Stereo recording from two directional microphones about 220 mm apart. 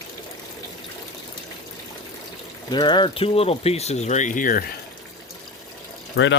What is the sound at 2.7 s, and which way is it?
Speech, 20° left (ahead or behind).